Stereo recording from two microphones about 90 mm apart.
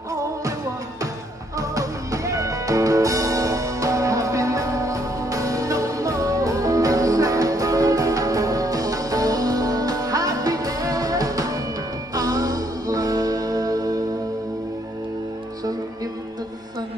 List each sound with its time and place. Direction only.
0.1 s music: 40° right (ahead or behind)
1.6 s music: 40° right (ahead or behind)